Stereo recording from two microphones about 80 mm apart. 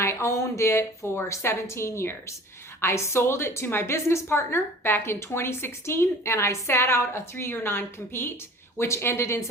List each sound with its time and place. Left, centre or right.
0.0 s a woman's voice: left